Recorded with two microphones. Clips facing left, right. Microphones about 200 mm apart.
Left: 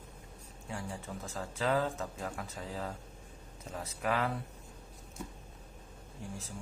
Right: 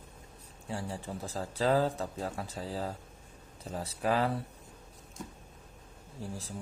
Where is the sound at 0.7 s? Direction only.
30° right (ahead or behind).